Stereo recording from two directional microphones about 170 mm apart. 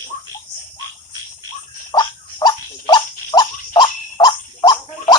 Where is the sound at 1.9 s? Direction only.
25° left (ahead or behind).